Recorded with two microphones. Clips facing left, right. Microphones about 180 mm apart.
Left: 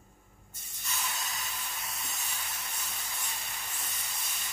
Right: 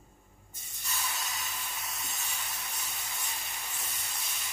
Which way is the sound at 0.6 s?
Centre (ahead or behind).